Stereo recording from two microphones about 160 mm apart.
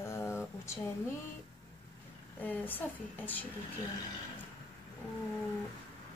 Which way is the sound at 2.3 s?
10° left (ahead or behind).